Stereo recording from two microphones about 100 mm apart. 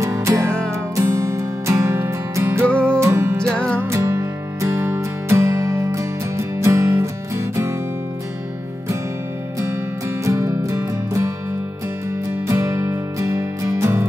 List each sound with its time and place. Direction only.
0.0 s music: 30° right (ahead or behind)
2.7 s music: 10° left (ahead or behind)
3.0 s music: 25° right (ahead or behind)
3.3 s music: 10° left (ahead or behind)
3.9 s music: 30° right (ahead or behind)
10.2 s music: 30° right (ahead or behind)
12.4 s music: 30° right (ahead or behind)